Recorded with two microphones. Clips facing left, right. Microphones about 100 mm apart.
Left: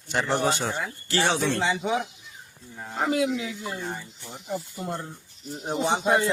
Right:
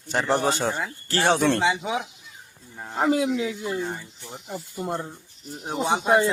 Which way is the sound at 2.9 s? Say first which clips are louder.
Right 3 dB; 30° right (ahead or behind).